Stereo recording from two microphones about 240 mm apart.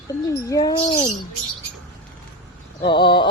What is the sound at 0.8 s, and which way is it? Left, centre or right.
Speech, left.